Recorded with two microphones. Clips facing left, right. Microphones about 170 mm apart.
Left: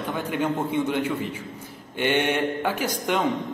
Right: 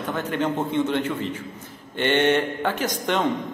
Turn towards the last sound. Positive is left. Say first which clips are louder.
# right 1 dB
turn(degrees=10)  # may be behind; listen again after turning